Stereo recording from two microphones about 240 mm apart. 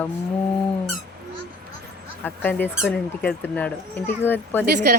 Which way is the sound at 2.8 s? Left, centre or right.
Centre.